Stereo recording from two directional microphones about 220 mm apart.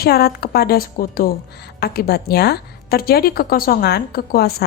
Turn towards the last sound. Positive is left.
turn(degrees=45)  # may be behind; listen again after turning